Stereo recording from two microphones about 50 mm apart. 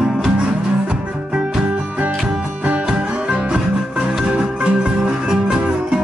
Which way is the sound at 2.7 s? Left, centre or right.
Right.